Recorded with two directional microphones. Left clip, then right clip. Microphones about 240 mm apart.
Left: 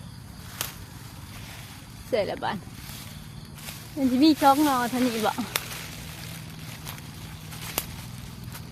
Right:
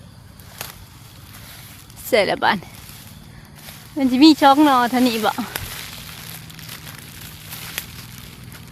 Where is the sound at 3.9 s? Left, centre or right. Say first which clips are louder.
Right 8 dB; right.